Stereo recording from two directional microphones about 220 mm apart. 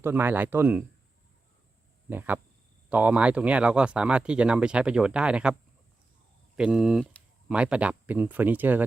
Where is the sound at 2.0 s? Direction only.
10° right (ahead or behind).